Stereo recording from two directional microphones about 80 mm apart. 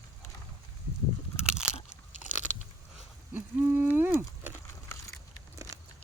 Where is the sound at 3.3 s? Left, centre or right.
Right.